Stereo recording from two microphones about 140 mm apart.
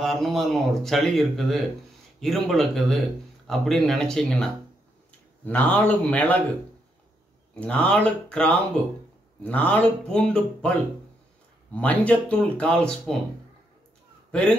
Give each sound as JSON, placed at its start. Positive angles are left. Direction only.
{"t": 0.0, "sound": "speech", "side_deg": 0}
{"t": 7.5, "sound": "speech", "side_deg": 10}
{"t": 11.7, "sound": "speech", "side_deg": 10}